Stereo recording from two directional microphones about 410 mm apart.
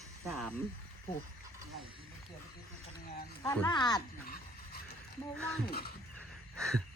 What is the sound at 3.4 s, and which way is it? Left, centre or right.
Speech, centre.